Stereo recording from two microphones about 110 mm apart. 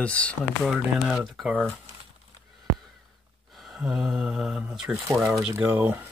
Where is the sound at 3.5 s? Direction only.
Centre (ahead or behind).